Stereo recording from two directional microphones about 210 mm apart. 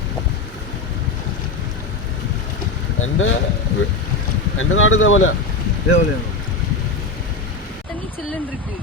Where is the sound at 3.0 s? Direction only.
70° left (ahead or behind).